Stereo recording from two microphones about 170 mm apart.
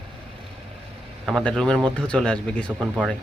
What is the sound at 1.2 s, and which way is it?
Speech, centre (ahead or behind).